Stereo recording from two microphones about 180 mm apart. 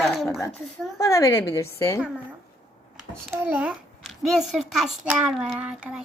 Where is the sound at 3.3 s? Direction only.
10° right (ahead or behind).